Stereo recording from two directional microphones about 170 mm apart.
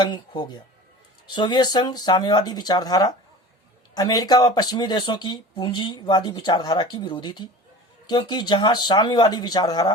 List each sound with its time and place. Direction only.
0.0 s speech: 25° left (ahead or behind)